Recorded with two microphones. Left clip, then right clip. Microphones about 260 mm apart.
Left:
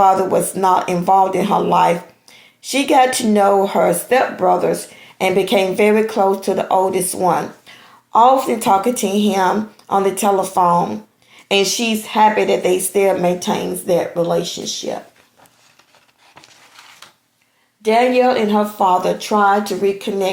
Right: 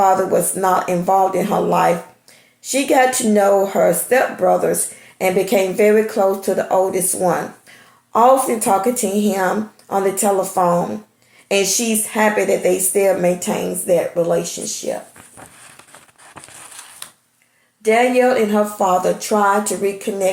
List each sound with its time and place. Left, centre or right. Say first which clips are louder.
0.0 s speech: left 1 dB; left
14.2 s speech: even; centre
18.2 s speech: even; left